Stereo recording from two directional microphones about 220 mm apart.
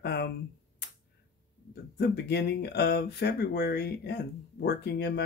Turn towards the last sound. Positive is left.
turn(degrees=50)  # may be behind; listen again after turning